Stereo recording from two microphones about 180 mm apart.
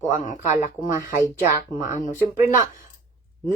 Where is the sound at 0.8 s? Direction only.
15° right (ahead or behind).